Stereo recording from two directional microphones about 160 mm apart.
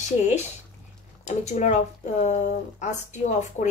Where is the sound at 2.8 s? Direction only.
50° left (ahead or behind).